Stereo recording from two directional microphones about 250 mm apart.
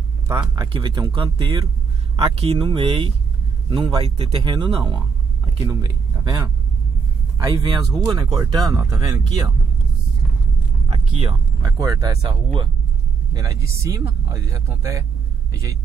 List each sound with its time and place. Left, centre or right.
0.3 s speech: centre
10.9 s speech: right